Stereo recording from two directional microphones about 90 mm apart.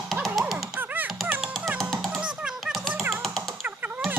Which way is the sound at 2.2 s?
10° right (ahead or behind).